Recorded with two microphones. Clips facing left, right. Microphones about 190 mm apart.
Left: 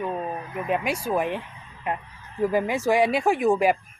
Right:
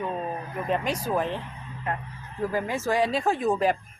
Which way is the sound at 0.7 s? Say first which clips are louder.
Left 1 dB; 10° left (ahead or behind).